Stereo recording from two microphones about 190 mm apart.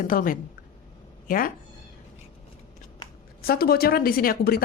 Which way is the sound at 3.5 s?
55° left (ahead or behind).